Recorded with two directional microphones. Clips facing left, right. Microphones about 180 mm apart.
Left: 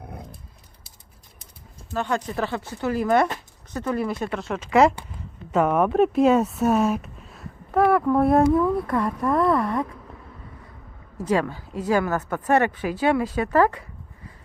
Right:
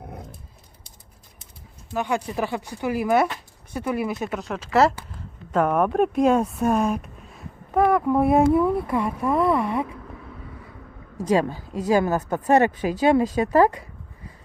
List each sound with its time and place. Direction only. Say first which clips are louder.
1.9 s speech: even; 10° right (ahead or behind)
11.2 s speech: right 2 dB; 15° right (ahead or behind)